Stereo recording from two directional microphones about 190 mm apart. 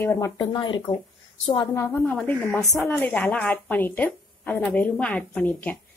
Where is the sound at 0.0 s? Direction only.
15° left (ahead or behind).